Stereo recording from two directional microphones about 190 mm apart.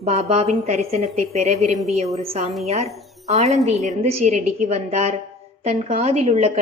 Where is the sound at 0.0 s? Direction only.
35° right (ahead or behind).